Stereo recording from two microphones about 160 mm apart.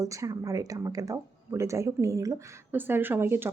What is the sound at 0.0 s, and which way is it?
Speech, 20° right (ahead or behind).